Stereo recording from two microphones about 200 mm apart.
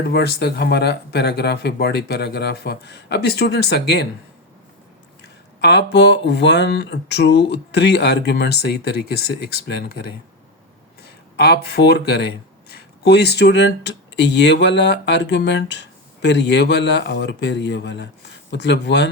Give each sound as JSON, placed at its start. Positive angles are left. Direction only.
{"t": 0.1, "sound": "speech", "side_deg": 55}
{"t": 5.5, "sound": "speech", "side_deg": 60}